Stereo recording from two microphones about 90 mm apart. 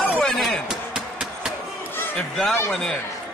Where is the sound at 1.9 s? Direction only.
25° left (ahead or behind).